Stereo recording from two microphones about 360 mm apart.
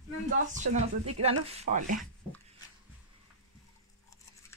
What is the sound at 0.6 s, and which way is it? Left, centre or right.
Speech, centre.